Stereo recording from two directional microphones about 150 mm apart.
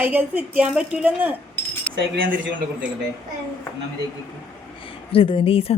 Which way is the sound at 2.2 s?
65° right (ahead or behind).